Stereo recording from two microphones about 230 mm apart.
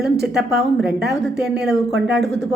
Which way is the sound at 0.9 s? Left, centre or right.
Right.